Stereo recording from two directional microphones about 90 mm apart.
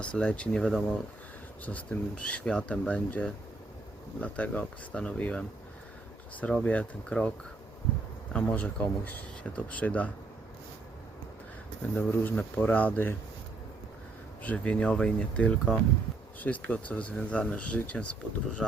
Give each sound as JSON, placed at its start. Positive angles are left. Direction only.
{"t": 0.0, "sound": "speech", "side_deg": 10}
{"t": 1.6, "sound": "speech", "side_deg": 15}
{"t": 11.8, "sound": "speech", "side_deg": 20}
{"t": 14.4, "sound": "speech", "side_deg": 15}